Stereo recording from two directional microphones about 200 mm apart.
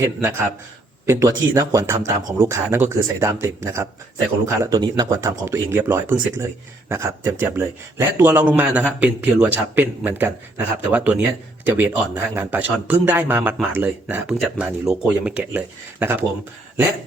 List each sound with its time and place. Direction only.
0.0 s a man's voice: 15° right (ahead or behind)